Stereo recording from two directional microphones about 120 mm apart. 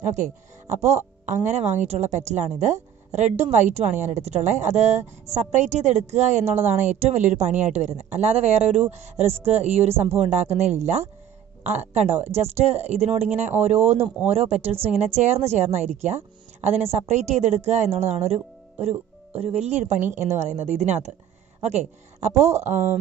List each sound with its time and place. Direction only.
0.8 s a woman's voice: 75° right (ahead or behind)
20.1 s a woman's voice: 75° right (ahead or behind)